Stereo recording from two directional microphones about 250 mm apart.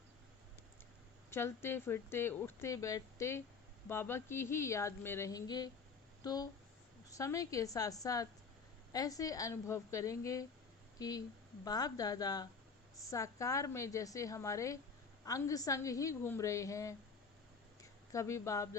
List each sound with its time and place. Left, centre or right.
1.3 s speech: centre
18.1 s speech: centre